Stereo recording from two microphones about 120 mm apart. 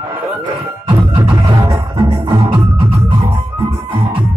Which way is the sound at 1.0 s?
40° right (ahead or behind).